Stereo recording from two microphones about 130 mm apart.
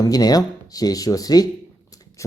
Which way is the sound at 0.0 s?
30° left (ahead or behind).